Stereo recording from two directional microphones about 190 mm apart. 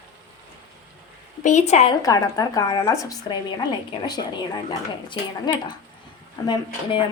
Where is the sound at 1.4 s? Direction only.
35° left (ahead or behind).